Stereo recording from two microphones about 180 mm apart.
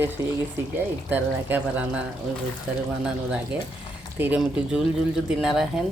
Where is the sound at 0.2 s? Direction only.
15° right (ahead or behind).